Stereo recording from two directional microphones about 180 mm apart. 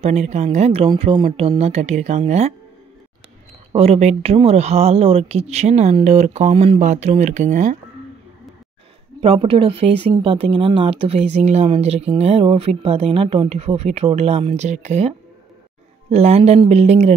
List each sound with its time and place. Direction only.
0.0 s speech: 40° right (ahead or behind)
3.7 s speech: 35° right (ahead or behind)
9.2 s speech: 30° right (ahead or behind)